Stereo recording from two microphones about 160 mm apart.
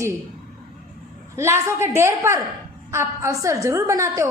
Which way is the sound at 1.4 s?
15° right (ahead or behind).